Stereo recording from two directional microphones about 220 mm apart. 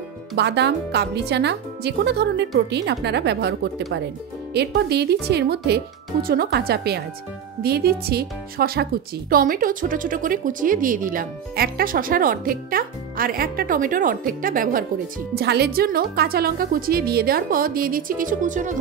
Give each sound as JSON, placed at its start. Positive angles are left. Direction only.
{"t": 0.4, "sound": "speech", "side_deg": -50}